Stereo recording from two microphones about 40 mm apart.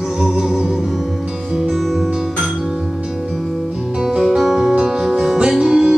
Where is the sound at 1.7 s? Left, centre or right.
Centre.